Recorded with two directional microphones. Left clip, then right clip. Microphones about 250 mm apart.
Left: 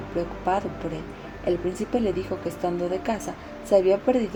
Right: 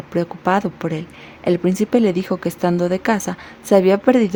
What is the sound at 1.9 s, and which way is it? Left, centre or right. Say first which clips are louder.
A woman's voice: right 7 dB; right.